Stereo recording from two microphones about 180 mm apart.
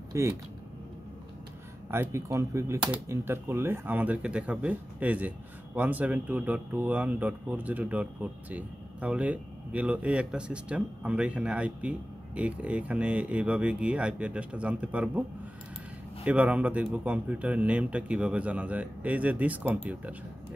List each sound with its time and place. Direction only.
0.1 s speech: 15° right (ahead or behind)
1.9 s speech: 15° right (ahead or behind)
16.3 s speech: 5° right (ahead or behind)